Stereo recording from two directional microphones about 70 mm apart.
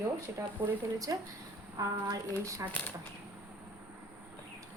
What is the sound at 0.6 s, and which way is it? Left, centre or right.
A woman's voice, right.